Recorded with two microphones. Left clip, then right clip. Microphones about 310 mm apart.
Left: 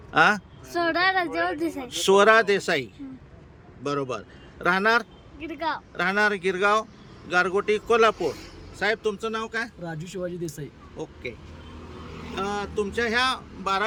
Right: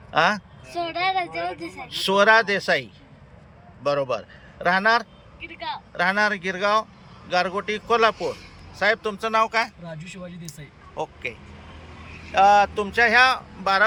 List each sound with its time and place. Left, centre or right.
0.1 s a man's voice: centre
10.9 s speech: centre